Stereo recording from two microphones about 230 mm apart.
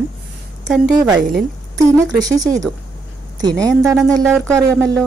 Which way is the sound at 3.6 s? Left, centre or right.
Centre.